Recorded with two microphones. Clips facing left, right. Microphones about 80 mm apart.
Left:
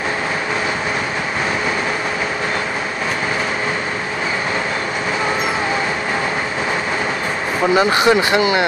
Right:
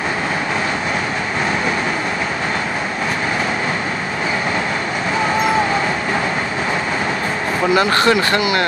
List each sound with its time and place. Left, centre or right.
7.7 s speech: centre